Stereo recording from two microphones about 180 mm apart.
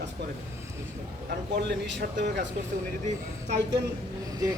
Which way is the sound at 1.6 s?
70° right (ahead or behind).